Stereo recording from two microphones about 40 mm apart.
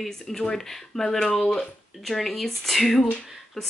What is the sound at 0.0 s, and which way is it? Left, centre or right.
Speech, centre.